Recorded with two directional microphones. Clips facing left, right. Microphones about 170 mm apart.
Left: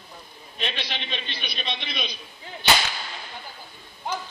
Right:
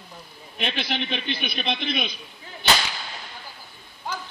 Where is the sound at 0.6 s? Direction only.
55° right (ahead or behind).